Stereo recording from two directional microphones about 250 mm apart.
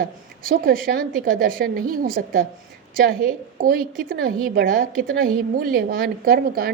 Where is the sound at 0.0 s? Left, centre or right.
Right.